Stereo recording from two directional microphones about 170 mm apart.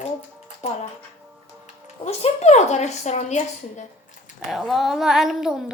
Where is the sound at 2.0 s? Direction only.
40° left (ahead or behind).